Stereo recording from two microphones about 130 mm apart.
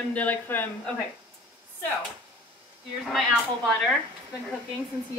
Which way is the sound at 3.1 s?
Centre (ahead or behind).